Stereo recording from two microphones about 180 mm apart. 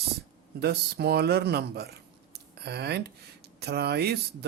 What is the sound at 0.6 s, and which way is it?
Speech, 65° right (ahead or behind).